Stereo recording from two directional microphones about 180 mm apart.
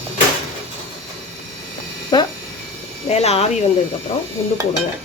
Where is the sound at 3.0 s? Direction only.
35° left (ahead or behind).